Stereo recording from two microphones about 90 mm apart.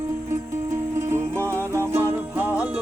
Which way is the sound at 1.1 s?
30° right (ahead or behind).